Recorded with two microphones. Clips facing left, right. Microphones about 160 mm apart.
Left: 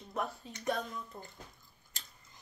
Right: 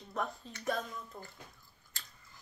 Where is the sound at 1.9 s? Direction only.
20° left (ahead or behind).